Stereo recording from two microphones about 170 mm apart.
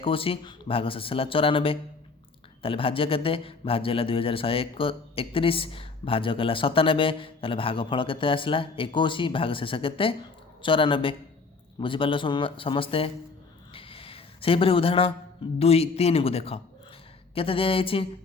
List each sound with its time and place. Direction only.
0.0 s a man's voice: 35° left (ahead or behind)
13.7 s a sound: 35° left (ahead or behind)
15.5 s a man's voice: 35° left (ahead or behind)